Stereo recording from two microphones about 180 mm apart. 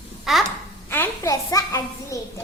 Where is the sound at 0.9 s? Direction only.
15° left (ahead or behind).